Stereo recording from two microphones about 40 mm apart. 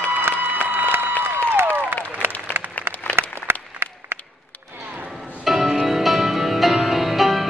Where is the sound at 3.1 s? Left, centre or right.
Right.